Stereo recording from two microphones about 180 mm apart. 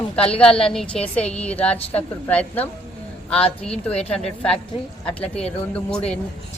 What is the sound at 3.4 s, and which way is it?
Speech, 35° left (ahead or behind).